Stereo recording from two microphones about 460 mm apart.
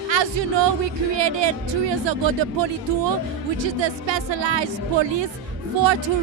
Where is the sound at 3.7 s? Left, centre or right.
Right.